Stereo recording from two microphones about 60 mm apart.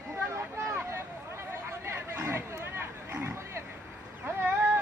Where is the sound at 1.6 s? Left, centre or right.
Right.